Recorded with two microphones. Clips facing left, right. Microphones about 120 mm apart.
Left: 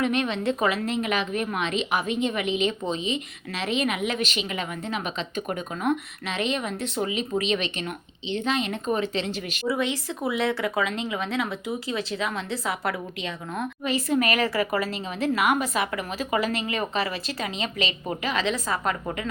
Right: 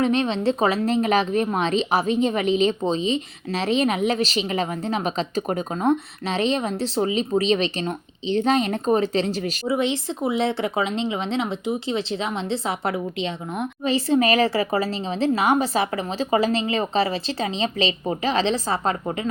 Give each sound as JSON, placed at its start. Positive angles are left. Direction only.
{"t": 0.0, "sound": "a woman's voice", "side_deg": -30}
{"t": 9.6, "sound": "speech", "side_deg": -25}